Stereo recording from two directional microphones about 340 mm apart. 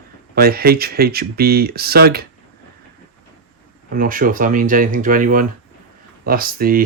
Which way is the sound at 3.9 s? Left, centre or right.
Right.